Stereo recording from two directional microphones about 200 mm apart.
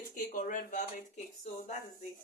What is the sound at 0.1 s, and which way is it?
Speech, 40° left (ahead or behind).